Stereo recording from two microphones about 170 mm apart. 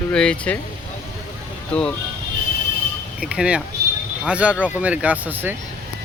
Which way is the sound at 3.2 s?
5° right (ahead or behind).